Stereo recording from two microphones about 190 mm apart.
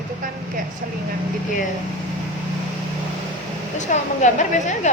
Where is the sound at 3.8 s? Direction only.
40° left (ahead or behind).